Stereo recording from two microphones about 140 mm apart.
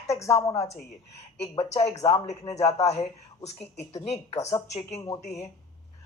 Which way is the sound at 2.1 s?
50° left (ahead or behind).